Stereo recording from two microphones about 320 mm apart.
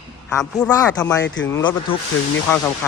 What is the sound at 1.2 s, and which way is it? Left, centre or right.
Speech, left.